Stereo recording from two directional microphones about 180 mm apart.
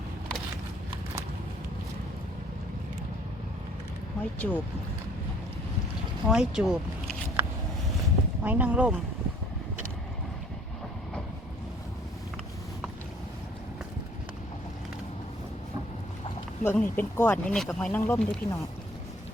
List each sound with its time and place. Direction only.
4.2 s speech: 10° left (ahead or behind)
6.2 s speech: 5° right (ahead or behind)
8.4 s speech: 10° right (ahead or behind)
16.6 s speech: 10° left (ahead or behind)
18.0 s speech: 15° left (ahead or behind)